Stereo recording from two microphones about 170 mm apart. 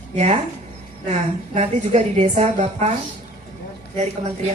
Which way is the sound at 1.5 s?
40° right (ahead or behind).